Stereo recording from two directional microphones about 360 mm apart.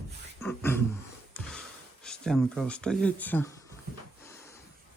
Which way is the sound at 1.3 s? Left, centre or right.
Centre.